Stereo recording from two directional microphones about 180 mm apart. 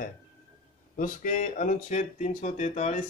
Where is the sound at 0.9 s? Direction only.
45° left (ahead or behind).